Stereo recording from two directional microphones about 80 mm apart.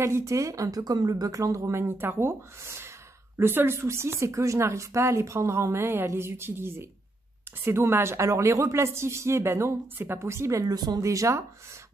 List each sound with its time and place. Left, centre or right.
0.0 s speech: right
11.0 s speech: right